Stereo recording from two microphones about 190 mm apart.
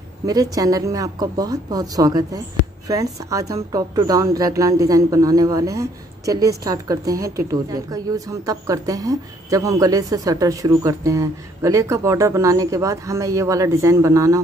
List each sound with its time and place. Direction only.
0.3 s a woman's voice: 20° right (ahead or behind)